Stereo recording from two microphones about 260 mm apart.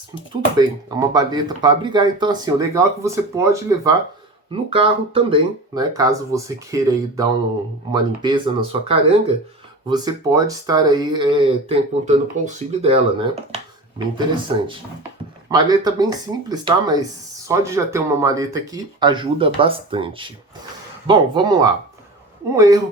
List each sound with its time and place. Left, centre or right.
0.6 s speech: centre